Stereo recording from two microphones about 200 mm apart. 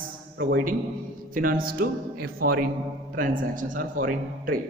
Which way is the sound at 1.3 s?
45° right (ahead or behind).